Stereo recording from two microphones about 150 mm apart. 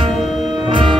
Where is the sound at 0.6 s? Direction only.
35° right (ahead or behind).